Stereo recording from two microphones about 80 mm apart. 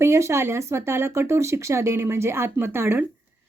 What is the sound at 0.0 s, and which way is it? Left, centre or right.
Speech, right.